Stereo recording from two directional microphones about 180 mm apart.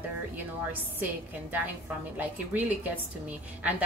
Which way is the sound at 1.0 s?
10° right (ahead or behind).